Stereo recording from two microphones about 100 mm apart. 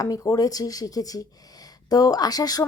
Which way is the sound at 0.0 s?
35° left (ahead or behind).